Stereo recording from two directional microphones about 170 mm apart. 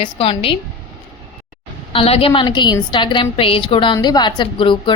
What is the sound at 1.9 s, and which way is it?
A woman's voice, 35° left (ahead or behind).